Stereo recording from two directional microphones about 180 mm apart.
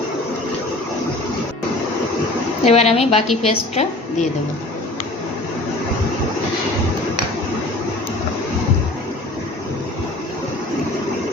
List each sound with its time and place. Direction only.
2.6 s a woman's voice: 35° left (ahead or behind)